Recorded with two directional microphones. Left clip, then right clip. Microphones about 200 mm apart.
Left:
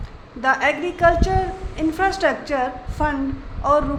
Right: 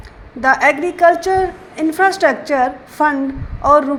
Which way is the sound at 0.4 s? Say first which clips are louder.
Right 6 dB; 30° right (ahead or behind).